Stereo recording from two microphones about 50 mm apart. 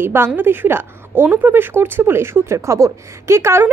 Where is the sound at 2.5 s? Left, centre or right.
Right.